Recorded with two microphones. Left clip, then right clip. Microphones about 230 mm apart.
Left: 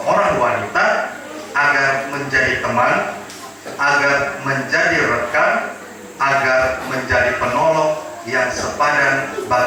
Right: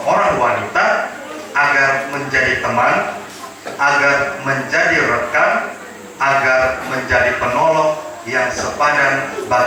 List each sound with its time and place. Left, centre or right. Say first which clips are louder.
0.1 s a sound: right 1 dB; centre
1.5 s speech: right 2 dB; centre
4.4 s speech: right 1 dB; centre